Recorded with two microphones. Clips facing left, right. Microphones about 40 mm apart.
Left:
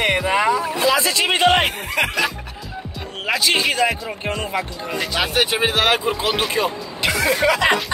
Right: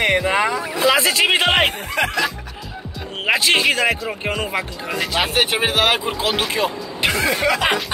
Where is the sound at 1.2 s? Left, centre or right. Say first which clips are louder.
Left 3 dB; centre.